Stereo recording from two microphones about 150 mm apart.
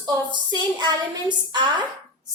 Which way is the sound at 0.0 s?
30° right (ahead or behind).